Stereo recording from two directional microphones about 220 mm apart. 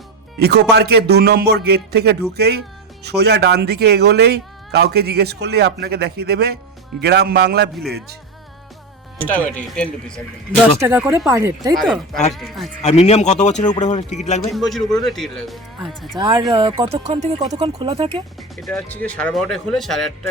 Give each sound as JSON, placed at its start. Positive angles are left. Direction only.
{"t": 0.3, "sound": "speech", "side_deg": -45}
{"t": 9.1, "sound": "speech", "side_deg": 5}
{"t": 10.8, "sound": "speech", "side_deg": -10}
{"t": 11.8, "sound": "speech", "side_deg": 0}
{"t": 12.8, "sound": "a man's voice", "side_deg": 30}
{"t": 14.5, "sound": "speech", "side_deg": 0}
{"t": 16.5, "sound": "speech", "side_deg": -25}
{"t": 18.3, "sound": "speech", "side_deg": 0}